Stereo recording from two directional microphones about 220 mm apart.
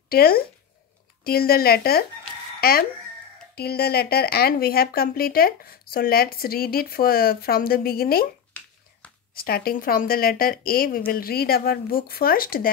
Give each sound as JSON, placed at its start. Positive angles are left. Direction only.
{"t": 0.1, "sound": "speech", "side_deg": 45}
{"t": 9.3, "sound": "a woman's voice", "side_deg": 40}